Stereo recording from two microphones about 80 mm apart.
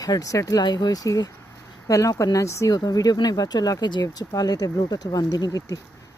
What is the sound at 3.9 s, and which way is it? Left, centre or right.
Speech, left.